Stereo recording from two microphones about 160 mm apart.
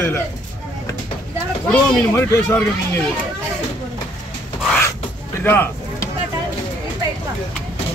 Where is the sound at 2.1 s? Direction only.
15° left (ahead or behind).